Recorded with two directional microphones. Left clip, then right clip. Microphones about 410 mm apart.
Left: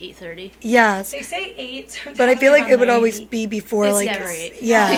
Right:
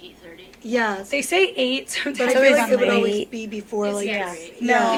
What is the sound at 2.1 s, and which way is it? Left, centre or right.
A woman's voice, left.